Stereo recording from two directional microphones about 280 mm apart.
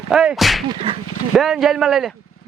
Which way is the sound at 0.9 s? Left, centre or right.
Centre.